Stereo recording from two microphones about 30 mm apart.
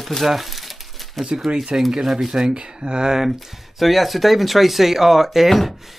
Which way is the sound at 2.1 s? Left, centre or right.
Centre.